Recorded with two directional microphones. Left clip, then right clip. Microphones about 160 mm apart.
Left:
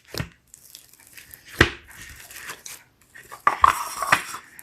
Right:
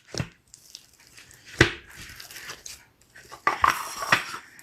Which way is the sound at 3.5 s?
Centre (ahead or behind).